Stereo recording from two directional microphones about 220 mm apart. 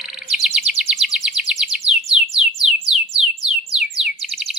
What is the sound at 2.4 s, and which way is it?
Bird, centre (ahead or behind).